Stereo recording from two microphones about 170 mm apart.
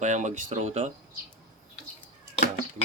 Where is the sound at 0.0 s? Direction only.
45° right (ahead or behind).